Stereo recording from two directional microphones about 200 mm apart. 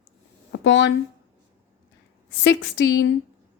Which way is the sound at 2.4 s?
65° left (ahead or behind).